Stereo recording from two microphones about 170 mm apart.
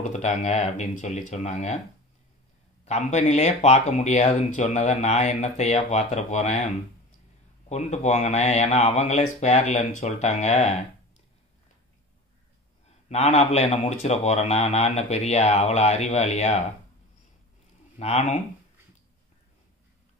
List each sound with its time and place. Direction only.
0.0 s speech: 40° left (ahead or behind)
2.8 s speech: 40° left (ahead or behind)
12.8 s speech: 40° left (ahead or behind)
17.9 s speech: 40° left (ahead or behind)